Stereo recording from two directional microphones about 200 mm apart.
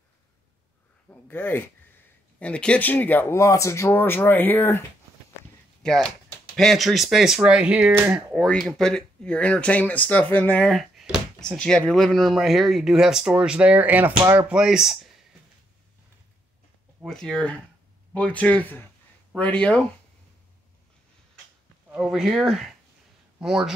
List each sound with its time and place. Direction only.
1.2 s speech: 10° left (ahead or behind); by 14.5 s 20° right (ahead or behind)
14.5 s speech: 5° right (ahead or behind)
17.0 s speech: centre (ahead or behind)
21.9 s speech: centre (ahead or behind)